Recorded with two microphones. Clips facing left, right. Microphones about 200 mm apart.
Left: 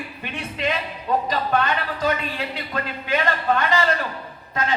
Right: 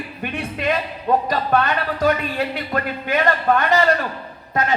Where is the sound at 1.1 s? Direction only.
55° right (ahead or behind).